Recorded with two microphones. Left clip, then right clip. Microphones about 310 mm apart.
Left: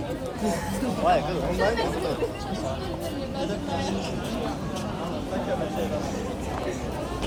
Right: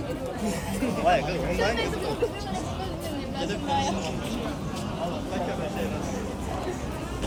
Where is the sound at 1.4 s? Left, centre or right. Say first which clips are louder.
Left 1 dB; centre.